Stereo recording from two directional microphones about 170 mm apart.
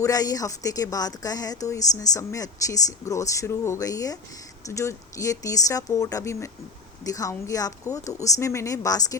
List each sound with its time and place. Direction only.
0.0 s speech: 20° left (ahead or behind)